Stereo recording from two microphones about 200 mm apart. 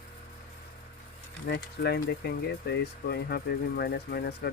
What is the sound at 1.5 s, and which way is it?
Speech, 55° left (ahead or behind).